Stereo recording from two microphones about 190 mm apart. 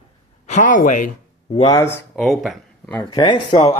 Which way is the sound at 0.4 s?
40° left (ahead or behind).